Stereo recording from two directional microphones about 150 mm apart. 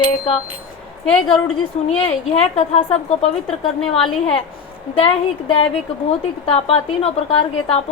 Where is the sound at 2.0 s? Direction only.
45° left (ahead or behind).